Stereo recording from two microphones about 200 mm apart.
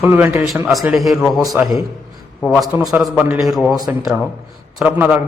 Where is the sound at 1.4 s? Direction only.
15° right (ahead or behind).